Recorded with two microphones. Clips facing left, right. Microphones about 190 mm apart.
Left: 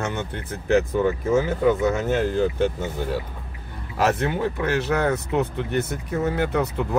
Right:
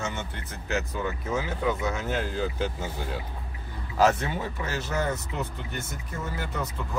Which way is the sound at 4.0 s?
60° left (ahead or behind).